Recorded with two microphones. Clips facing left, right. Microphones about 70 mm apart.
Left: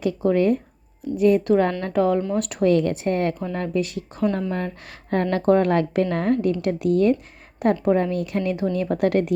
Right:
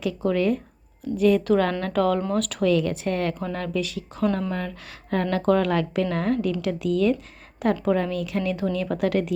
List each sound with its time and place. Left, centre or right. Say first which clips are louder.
0.3 s a woman's voice: left 3 dB; left
1.1 s a woman's voice: left 2 dB; centre
2.6 s a woman's voice: left 4 dB; left